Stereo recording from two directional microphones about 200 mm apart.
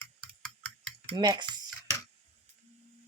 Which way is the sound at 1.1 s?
20° right (ahead or behind).